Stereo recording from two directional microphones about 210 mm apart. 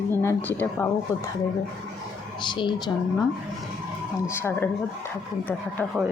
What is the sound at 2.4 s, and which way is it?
Speech, 20° left (ahead or behind).